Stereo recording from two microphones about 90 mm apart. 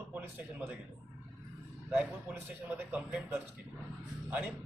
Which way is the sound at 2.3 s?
20° right (ahead or behind).